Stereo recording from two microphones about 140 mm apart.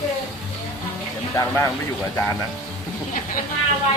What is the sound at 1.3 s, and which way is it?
Speech, 20° left (ahead or behind).